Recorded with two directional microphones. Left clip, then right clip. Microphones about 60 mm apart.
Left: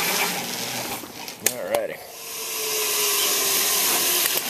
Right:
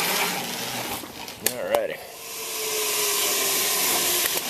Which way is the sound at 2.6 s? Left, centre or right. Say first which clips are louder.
Left 1 dB; right.